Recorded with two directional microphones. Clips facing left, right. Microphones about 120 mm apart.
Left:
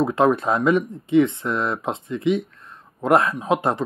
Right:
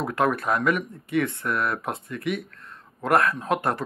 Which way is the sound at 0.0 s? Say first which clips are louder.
Left 6 dB; 25° left (ahead or behind).